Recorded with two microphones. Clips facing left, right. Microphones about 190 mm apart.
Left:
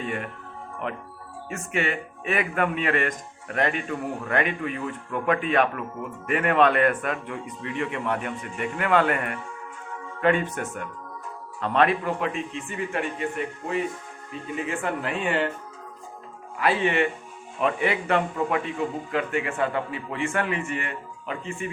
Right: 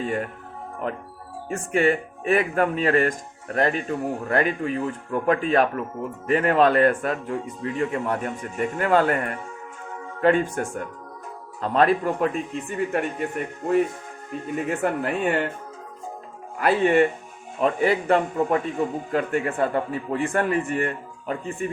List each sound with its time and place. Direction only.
0.0 s a man's voice: 35° right (ahead or behind)
16.6 s a man's voice: 45° right (ahead or behind)